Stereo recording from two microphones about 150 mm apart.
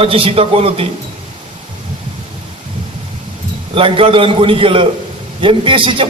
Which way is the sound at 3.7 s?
35° right (ahead or behind).